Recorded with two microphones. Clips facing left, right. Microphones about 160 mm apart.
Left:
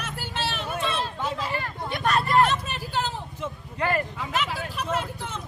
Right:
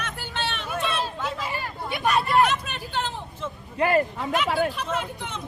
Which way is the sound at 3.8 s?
25° right (ahead or behind).